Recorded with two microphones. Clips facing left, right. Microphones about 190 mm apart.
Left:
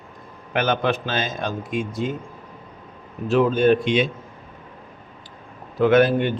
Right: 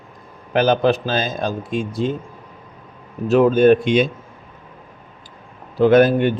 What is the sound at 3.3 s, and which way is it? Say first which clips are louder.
Speech: right 5 dB; 50° right (ahead or behind).